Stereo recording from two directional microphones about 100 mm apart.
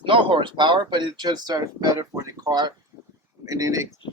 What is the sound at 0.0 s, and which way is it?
Speech, 60° right (ahead or behind).